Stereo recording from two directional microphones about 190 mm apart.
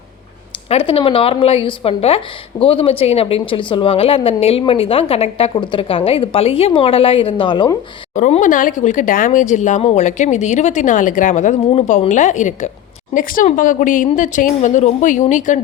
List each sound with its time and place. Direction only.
0.7 s speech: 30° left (ahead or behind)
8.1 s speech: 40° left (ahead or behind)